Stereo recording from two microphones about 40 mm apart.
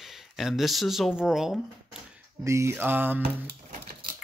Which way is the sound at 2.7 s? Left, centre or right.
Right.